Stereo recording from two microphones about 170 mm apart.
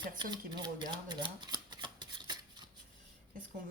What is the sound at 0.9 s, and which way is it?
Shuffling cards, 25° right (ahead or behind).